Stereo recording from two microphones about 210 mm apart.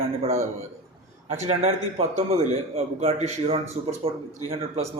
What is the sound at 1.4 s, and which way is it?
A man's voice, 30° right (ahead or behind).